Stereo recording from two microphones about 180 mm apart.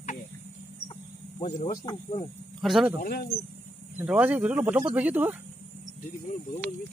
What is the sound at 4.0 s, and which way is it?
Speech, 10° right (ahead or behind).